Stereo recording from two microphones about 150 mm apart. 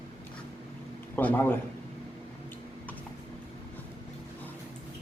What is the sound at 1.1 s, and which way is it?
Speech, 15° left (ahead or behind).